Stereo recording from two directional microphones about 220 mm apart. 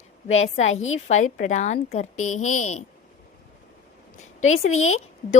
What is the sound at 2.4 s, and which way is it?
Speech, 35° left (ahead or behind).